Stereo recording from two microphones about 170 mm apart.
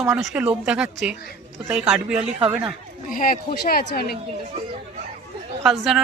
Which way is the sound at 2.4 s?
35° right (ahead or behind).